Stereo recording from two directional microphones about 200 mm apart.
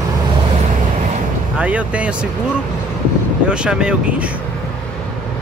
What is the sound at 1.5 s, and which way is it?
Speech, 5° right (ahead or behind).